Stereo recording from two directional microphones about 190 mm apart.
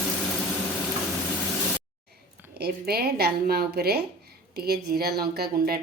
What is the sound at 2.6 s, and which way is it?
Speech, 55° right (ahead or behind).